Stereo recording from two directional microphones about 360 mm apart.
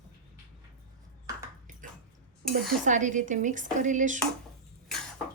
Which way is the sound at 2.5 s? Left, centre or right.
Right.